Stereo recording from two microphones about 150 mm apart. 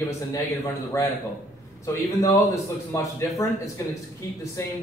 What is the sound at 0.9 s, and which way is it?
Speech, 20° left (ahead or behind).